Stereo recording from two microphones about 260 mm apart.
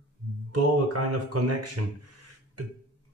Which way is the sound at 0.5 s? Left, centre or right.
Right.